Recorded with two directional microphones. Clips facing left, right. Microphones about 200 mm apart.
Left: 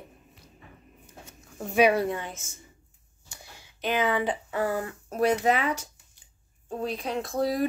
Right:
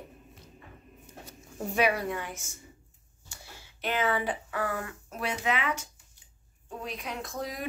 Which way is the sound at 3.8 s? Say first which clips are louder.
Left 3 dB; 15° left (ahead or behind).